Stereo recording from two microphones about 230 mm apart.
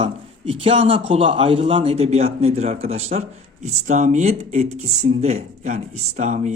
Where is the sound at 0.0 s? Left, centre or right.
Right.